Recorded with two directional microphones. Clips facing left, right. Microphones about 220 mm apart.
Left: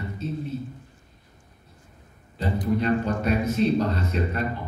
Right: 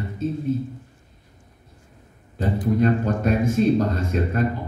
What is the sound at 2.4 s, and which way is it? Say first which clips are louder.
A man's voice: right 4 dB; 50° right (ahead or behind).